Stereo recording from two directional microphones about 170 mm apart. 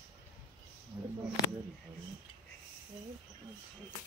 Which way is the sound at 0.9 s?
10° right (ahead or behind).